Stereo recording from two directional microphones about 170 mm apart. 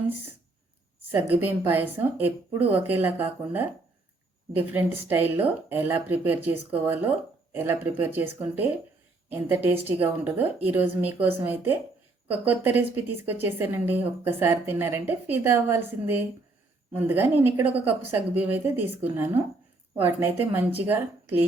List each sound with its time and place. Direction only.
1.1 s a woman's voice: 10° right (ahead or behind)